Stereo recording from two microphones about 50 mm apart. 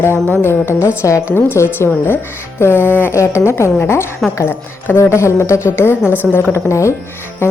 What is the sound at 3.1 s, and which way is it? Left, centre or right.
A woman's voice, left.